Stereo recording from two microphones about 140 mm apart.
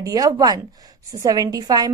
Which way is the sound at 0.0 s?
25° right (ahead or behind).